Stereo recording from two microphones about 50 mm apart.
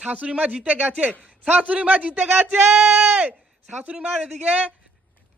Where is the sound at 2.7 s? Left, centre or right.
Centre.